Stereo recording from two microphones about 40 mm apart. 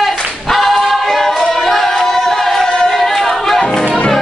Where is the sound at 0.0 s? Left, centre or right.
Centre.